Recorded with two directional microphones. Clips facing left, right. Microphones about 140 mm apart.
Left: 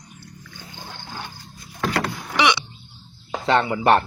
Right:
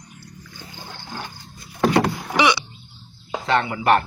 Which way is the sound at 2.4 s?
5° right (ahead or behind).